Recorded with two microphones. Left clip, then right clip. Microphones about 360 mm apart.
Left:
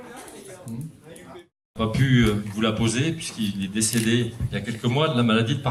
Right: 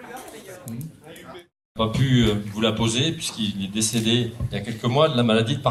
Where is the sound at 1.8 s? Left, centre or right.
Centre.